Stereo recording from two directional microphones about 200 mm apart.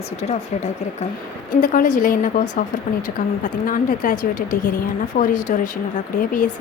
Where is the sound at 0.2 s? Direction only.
35° left (ahead or behind).